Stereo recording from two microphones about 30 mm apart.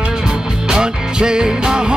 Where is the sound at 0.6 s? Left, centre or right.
Right.